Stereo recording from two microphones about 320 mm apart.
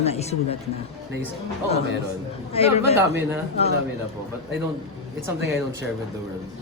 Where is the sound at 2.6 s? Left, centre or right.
Centre.